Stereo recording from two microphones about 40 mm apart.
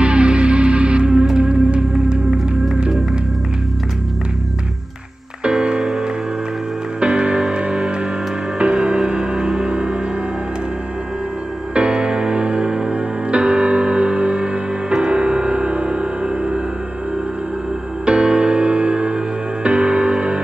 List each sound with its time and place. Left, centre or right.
0.0 s music: right
1.1 s music: centre
1.4 s music: right
5.4 s music: right
7.0 s music: right
11.7 s music: right
18.0 s music: right